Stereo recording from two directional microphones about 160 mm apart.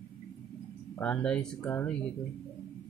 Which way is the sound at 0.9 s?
10° left (ahead or behind).